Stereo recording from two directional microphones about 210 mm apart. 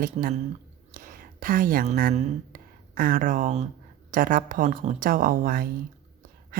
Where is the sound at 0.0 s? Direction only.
40° right (ahead or behind).